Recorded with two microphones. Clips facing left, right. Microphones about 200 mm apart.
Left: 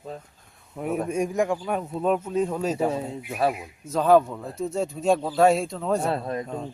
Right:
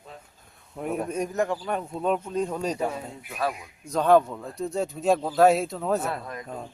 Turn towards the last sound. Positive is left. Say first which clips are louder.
# left 6 dB
turn(degrees=30)  # may be behind; listen again after turning